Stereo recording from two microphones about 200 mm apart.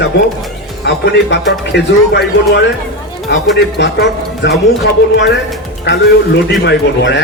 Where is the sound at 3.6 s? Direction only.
55° left (ahead or behind).